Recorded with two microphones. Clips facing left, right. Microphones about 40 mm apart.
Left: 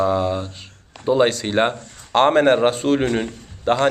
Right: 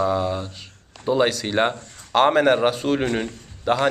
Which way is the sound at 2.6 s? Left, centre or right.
Centre.